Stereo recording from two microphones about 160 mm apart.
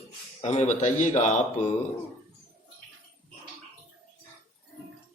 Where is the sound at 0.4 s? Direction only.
45° left (ahead or behind).